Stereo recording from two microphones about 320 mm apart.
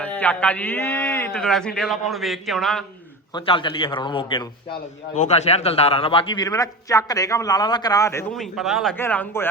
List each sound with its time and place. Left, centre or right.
0.0 s a man's voice: centre
3.3 s a man's voice: centre